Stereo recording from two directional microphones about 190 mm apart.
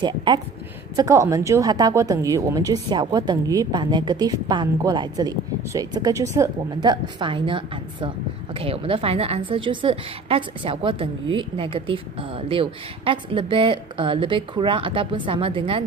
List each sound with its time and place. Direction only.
0.0 s a woman's voice: 25° right (ahead or behind)